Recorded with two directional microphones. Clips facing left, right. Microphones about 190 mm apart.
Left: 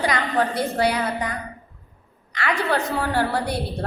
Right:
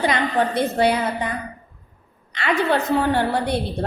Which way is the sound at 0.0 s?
25° right (ahead or behind).